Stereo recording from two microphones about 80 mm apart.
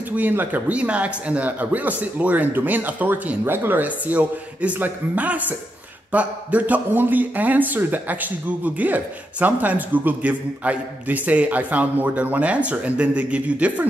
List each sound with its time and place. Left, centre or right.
0.1 s speech: right